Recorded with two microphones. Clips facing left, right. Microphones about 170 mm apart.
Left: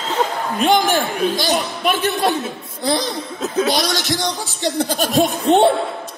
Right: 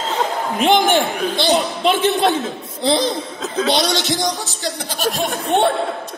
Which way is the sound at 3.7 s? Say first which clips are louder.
Right 2 dB; 25° right (ahead or behind).